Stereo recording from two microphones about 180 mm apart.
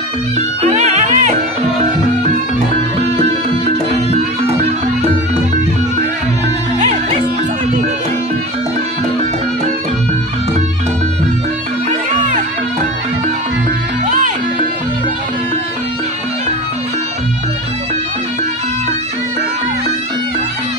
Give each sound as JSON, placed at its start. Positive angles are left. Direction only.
{"t": 0.6, "sound": "music", "side_deg": -35}